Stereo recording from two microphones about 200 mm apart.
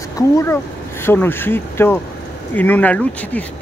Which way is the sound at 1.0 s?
10° left (ahead or behind).